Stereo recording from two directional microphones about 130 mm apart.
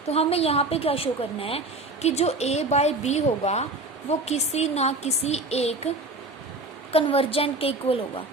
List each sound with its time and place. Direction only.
0.1 s a woman's voice: 50° left (ahead or behind)
6.9 s a woman's voice: 45° left (ahead or behind)